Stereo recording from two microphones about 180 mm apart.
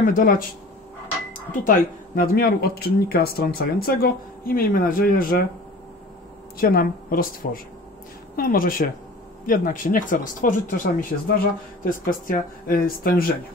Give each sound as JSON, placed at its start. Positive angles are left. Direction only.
{"t": 0.0, "sound": "speech", "side_deg": 50}
{"t": 6.6, "sound": "speech", "side_deg": 55}